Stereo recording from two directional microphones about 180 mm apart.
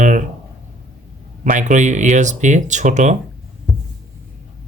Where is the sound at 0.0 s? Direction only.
45° right (ahead or behind).